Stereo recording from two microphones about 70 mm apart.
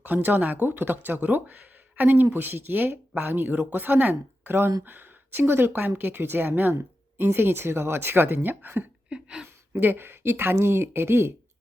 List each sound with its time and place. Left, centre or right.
0.0 s speech: right
9.0 s a sound: centre
9.7 s speech: right